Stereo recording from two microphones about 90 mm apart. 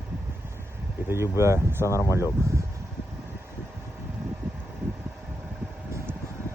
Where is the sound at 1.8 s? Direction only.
35° left (ahead or behind).